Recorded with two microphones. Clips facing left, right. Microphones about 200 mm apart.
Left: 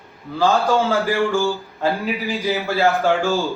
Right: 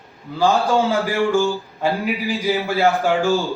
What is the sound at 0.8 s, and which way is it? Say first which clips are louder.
A man's voice: even; 15° right (ahead or behind).